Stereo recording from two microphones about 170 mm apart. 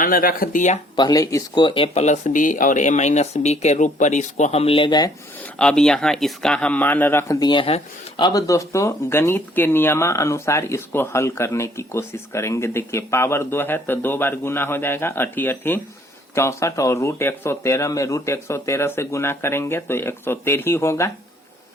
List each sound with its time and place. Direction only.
0.0 s speech: 55° left (ahead or behind)
0.9 s speech: 20° left (ahead or behind)
5.5 s speech: 5° left (ahead or behind)